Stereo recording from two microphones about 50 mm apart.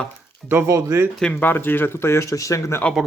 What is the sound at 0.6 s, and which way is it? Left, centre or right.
Speech, right.